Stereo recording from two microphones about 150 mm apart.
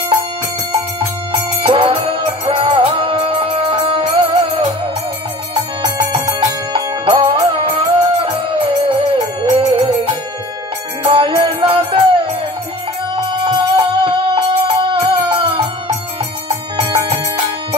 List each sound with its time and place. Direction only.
1.3 s music: 35° right (ahead or behind)
6.7 s music: 35° right (ahead or behind)
11.1 s music: 35° right (ahead or behind)